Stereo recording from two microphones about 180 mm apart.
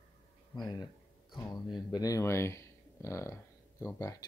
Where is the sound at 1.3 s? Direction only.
25° left (ahead or behind).